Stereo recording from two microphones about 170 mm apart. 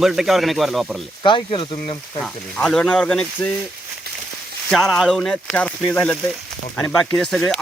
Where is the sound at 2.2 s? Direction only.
5° left (ahead or behind).